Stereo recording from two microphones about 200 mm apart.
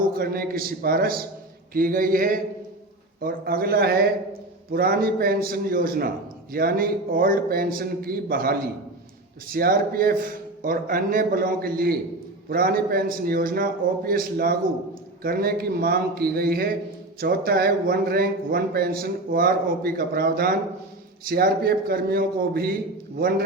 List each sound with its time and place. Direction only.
0.2 s speech: 50° right (ahead or behind)